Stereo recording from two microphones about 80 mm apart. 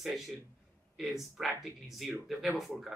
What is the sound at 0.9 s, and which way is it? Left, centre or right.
Speech, centre.